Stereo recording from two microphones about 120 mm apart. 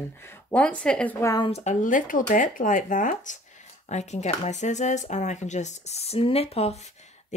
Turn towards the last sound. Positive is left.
turn(degrees=60)  # may be behind; listen again after turning